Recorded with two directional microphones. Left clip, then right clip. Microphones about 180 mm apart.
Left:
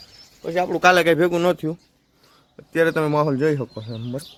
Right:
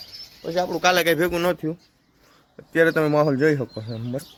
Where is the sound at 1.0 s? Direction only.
35° left (ahead or behind).